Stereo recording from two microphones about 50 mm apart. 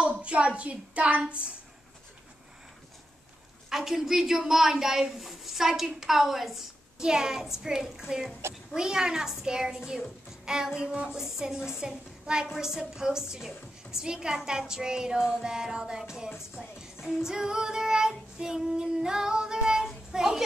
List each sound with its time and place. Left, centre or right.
0.1 s a child's voice: right
3.7 s a woman's voice: centre